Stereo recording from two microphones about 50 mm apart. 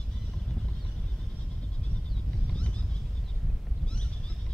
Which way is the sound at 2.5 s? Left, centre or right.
Left.